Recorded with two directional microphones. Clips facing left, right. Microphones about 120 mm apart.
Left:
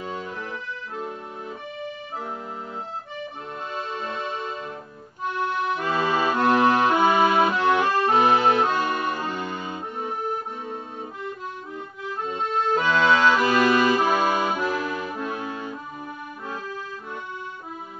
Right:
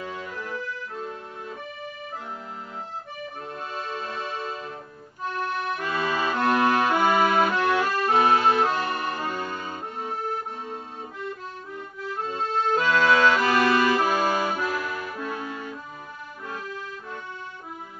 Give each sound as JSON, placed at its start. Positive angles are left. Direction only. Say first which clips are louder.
{"t": 0.0, "sound": "accordion", "louder": "left 2 dB", "side_deg": 25}
{"t": 3.7, "sound": "music", "louder": "left 2 dB", "side_deg": 20}
{"t": 5.2, "sound": "accordion", "louder": "left 3 dB", "side_deg": 20}
{"t": 12.3, "sound": "accordion", "louder": "left 1 dB", "side_deg": 20}